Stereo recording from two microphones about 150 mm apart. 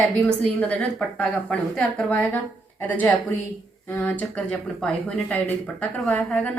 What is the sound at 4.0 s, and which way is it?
A woman's voice, 5° left (ahead or behind).